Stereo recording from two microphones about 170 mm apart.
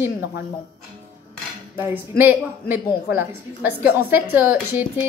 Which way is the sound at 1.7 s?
15° right (ahead or behind).